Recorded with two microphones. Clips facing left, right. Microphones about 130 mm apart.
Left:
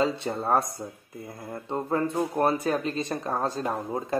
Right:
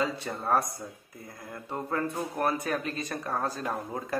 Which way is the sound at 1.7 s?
25° left (ahead or behind).